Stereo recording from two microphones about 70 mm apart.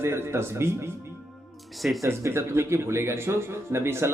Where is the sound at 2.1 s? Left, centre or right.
Right.